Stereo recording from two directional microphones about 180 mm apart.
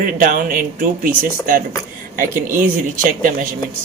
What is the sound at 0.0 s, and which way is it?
Speech, 50° right (ahead or behind).